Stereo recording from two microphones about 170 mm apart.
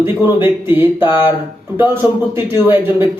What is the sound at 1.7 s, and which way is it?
A man's voice, 15° right (ahead or behind).